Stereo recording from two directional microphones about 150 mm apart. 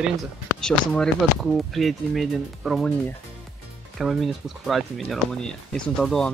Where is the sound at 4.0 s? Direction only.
Centre (ahead or behind).